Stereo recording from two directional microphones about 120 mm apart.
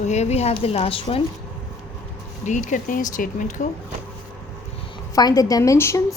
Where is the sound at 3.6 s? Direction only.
75° left (ahead or behind).